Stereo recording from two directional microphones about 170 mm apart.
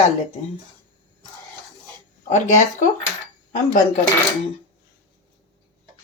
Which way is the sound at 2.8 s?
45° left (ahead or behind).